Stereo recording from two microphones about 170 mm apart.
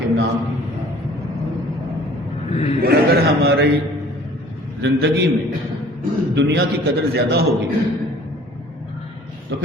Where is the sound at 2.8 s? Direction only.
65° right (ahead or behind).